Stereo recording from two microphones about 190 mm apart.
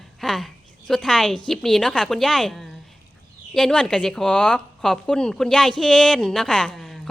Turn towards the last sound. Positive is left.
turn(degrees=0)  # may be behind; listen again after turning